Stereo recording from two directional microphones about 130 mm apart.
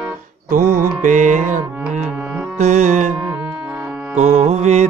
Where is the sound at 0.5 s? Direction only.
90° right.